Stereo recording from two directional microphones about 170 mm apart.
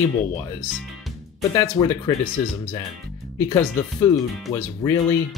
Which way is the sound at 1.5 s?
20° left (ahead or behind).